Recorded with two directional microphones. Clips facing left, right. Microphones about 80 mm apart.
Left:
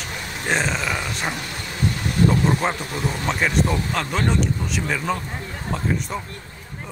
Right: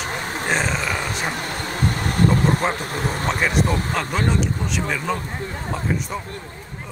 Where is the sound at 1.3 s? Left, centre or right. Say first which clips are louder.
Right 4 dB; right.